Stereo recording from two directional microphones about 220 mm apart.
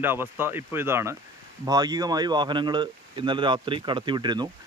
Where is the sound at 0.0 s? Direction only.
10° right (ahead or behind).